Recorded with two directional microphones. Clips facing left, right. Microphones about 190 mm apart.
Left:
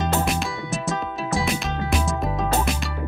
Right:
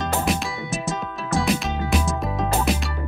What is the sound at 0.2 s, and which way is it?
Music, centre (ahead or behind).